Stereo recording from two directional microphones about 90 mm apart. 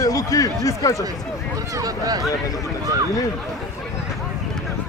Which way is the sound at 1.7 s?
45° right (ahead or behind).